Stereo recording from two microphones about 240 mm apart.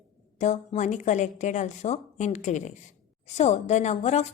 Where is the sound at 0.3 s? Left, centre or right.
Left.